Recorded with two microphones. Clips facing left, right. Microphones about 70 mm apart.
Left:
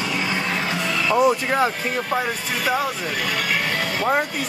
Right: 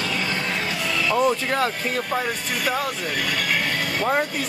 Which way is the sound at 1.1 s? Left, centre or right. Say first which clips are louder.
Left 3 dB; centre.